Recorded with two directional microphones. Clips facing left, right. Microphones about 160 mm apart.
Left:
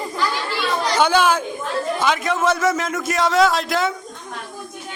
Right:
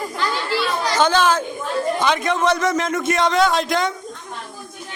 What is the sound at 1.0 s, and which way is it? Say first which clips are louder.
A man's voice: even; 10° left (ahead or behind).